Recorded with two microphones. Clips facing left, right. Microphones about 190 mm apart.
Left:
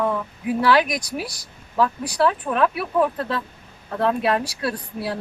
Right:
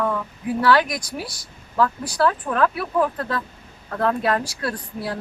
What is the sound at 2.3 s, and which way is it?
Speech, 15° left (ahead or behind).